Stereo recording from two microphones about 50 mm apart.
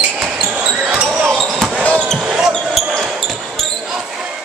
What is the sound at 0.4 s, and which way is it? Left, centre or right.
Basketball bounce, right.